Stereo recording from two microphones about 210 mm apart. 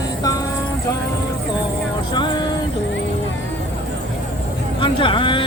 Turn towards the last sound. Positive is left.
turn(degrees=25)  # may be behind; listen again after turning